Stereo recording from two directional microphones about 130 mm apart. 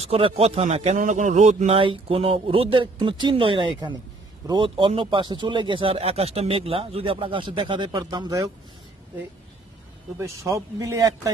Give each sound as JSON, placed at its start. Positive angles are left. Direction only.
{"t": 0.0, "sound": "speech", "side_deg": -50}
{"t": 0.9, "sound": "a man's voice", "side_deg": -75}
{"t": 1.8, "sound": "speech", "side_deg": -45}
{"t": 10.2, "sound": "a man's voice", "side_deg": -25}